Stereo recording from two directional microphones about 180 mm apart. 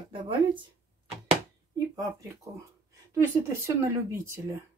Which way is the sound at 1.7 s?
20° right (ahead or behind).